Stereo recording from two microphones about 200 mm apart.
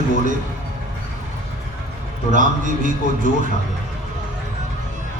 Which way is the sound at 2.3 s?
40° right (ahead or behind).